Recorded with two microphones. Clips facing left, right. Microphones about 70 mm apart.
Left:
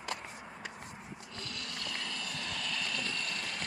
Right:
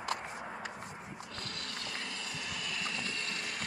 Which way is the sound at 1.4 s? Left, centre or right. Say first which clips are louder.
Left 2 dB; right.